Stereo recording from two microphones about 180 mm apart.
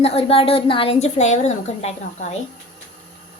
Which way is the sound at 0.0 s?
30° left (ahead or behind).